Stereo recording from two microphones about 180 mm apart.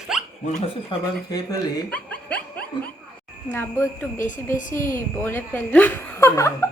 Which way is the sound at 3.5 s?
10° left (ahead or behind).